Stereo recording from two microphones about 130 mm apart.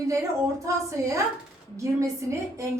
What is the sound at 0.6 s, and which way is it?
A woman's voice, 25° right (ahead or behind).